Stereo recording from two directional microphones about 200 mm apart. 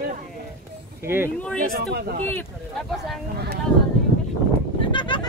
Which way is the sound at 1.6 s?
50° right (ahead or behind).